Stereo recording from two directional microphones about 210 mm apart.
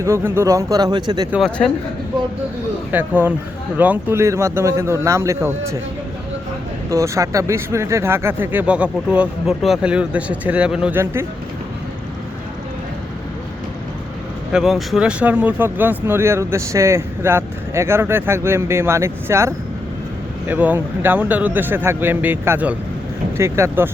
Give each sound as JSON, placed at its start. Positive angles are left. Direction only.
{"t": 0.0, "sound": "speech", "side_deg": -10}
{"t": 1.3, "sound": "speech", "side_deg": 0}
{"t": 2.9, "sound": "speech", "side_deg": -10}
{"t": 6.9, "sound": "speech", "side_deg": -15}
{"t": 14.5, "sound": "speech", "side_deg": 0}